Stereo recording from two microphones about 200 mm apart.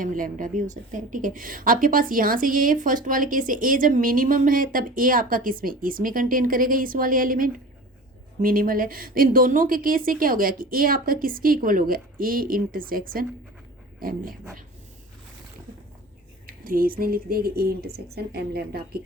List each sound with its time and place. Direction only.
0.0 s a woman's voice: 40° right (ahead or behind)
16.5 s a woman's voice: 45° right (ahead or behind)